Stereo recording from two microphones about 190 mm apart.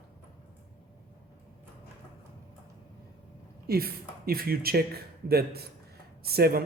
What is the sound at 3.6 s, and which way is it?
A man's voice, 55° right (ahead or behind).